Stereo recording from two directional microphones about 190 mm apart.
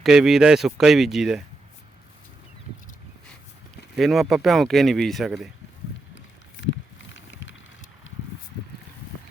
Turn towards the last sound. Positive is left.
turn(degrees=75)  # may be behind; listen again after turning